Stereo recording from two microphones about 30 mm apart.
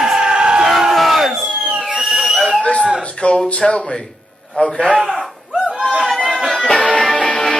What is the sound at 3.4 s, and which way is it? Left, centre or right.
Speech, left.